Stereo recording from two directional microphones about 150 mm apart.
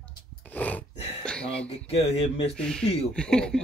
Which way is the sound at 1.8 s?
40° left (ahead or behind).